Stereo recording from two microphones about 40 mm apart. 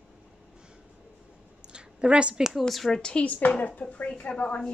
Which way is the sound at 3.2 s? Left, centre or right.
Left.